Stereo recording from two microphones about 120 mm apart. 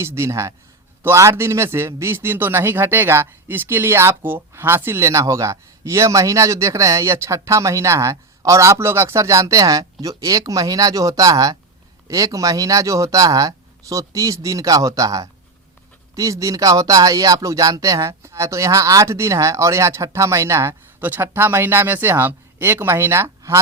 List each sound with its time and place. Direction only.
0.0 s speech: 20° right (ahead or behind)